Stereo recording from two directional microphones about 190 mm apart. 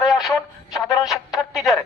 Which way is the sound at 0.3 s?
20° left (ahead or behind).